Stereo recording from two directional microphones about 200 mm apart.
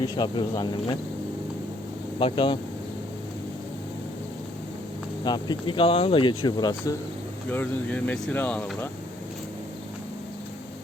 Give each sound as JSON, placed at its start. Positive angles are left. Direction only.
{"t": 0.2, "sound": "speech", "side_deg": 20}
{"t": 2.1, "sound": "speech", "side_deg": 25}
{"t": 5.2, "sound": "speech", "side_deg": 20}
{"t": 7.5, "sound": "speech", "side_deg": 10}